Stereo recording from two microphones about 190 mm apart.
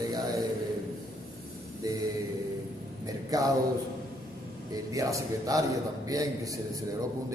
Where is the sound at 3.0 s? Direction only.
20° right (ahead or behind).